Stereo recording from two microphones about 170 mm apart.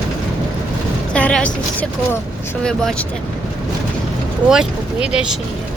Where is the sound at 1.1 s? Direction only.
5° left (ahead or behind).